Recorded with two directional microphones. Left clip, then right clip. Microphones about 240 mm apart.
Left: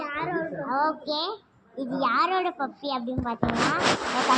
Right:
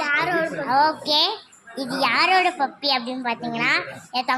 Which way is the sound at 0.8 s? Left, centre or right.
Centre.